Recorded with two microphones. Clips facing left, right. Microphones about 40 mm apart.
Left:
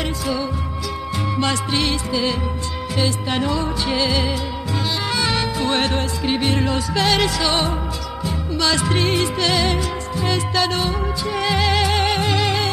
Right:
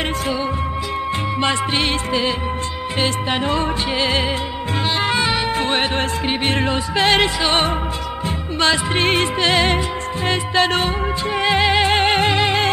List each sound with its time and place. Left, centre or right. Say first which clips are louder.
1.4 s music: right 1 dB; right
5.9 s music: right 1 dB; right
8.9 s music: right 2 dB; right
11.3 s music: right 3 dB; right